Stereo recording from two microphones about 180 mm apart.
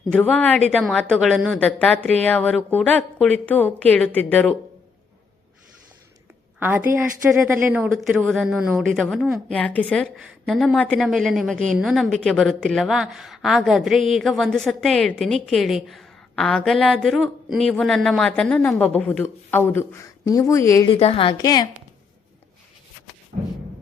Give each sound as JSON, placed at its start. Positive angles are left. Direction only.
{"t": 0.1, "sound": "a woman's voice", "side_deg": 5}
{"t": 6.6, "sound": "a woman's voice", "side_deg": -10}
{"t": 7.9, "sound": "a woman's voice", "side_deg": 0}
{"t": 9.6, "sound": "a woman's voice", "side_deg": 5}
{"t": 20.8, "sound": "a woman's voice", "side_deg": 30}